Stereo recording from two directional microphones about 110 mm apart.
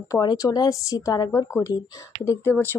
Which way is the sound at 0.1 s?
35° left (ahead or behind).